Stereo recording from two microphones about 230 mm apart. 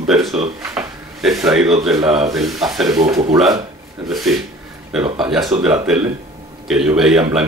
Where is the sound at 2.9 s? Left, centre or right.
Centre.